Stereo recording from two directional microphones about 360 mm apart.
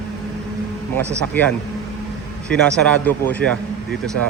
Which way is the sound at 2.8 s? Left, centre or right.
Centre.